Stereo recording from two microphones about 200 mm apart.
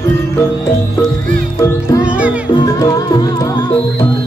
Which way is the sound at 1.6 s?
15° left (ahead or behind).